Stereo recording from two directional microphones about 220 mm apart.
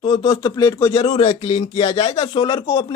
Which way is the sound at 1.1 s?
25° left (ahead or behind).